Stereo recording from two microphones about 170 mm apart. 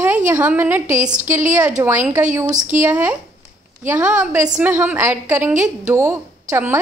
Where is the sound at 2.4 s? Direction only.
50° right (ahead or behind).